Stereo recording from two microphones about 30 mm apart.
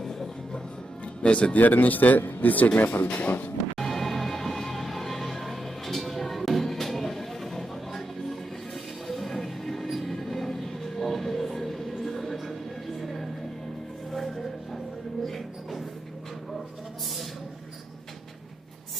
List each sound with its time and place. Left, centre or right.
0.0 s music: centre
1.3 s speech: left
1.6 s speech: left
2.7 s speech: left
3.2 s speech: left
3.8 s music: centre
13.0 s a sound: centre